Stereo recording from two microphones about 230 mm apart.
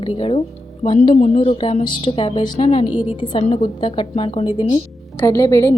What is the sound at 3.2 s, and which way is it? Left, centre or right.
A woman's voice, left.